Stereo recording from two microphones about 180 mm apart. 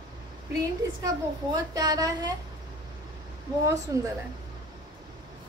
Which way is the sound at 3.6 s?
20° right (ahead or behind).